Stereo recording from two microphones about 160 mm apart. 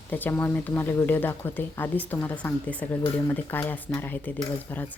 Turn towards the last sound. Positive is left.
turn(degrees=10)  # may be behind; listen again after turning